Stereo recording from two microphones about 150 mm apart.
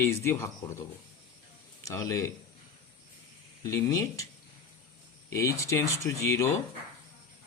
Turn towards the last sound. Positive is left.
turn(degrees=20)  # may be behind; listen again after turning